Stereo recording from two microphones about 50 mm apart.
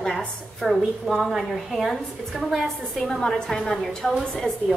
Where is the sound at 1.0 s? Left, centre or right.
Centre.